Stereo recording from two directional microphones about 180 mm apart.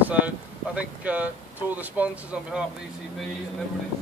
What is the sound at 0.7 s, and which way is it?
Speech, 10° right (ahead or behind).